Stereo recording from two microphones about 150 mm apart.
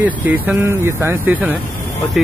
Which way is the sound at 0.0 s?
15° right (ahead or behind).